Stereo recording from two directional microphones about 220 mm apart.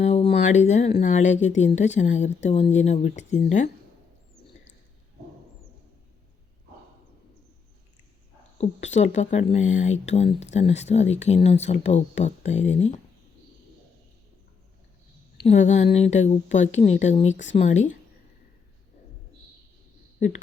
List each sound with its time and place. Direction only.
0.0 s a sound: 30° left (ahead or behind)
0.3 s a woman's voice: 30° left (ahead or behind)
8.5 s a woman's voice: 30° left (ahead or behind)
15.4 s a woman's voice: 30° left (ahead or behind)